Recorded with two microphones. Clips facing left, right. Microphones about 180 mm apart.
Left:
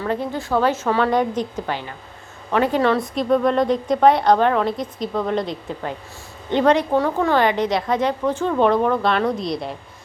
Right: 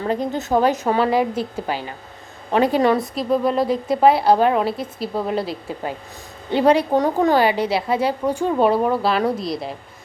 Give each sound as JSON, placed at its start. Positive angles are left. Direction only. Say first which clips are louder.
{"t": 0.1, "sound": "a woman's voice", "louder": "right 2 dB", "side_deg": -20}